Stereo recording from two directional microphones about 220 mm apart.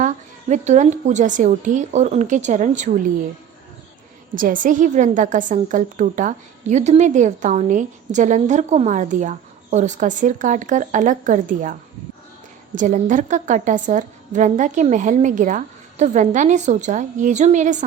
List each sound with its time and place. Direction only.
0.0 s a woman's voice: 30° right (ahead or behind)
4.4 s a woman's voice: 35° right (ahead or behind)
12.7 s a woman's voice: 35° right (ahead or behind)